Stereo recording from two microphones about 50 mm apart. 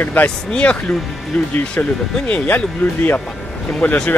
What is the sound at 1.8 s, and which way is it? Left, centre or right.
Speech, left.